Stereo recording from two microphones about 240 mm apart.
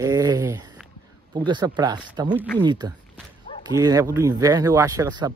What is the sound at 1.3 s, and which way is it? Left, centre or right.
Speech, centre.